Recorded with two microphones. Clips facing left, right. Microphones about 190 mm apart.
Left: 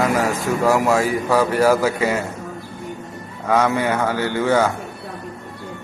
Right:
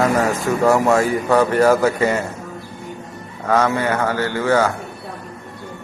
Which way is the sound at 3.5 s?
15° left (ahead or behind).